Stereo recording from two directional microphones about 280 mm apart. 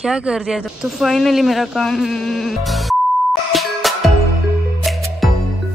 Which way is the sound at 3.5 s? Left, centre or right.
Centre.